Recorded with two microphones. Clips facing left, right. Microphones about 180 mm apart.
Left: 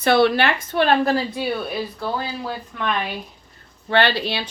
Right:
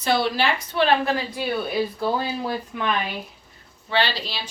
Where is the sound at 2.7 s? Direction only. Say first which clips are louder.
Even; 10° right (ahead or behind).